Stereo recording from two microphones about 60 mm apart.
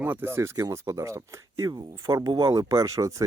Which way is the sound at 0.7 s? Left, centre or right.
Right.